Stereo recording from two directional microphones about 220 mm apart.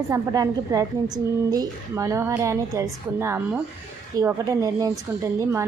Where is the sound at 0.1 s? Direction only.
15° right (ahead or behind).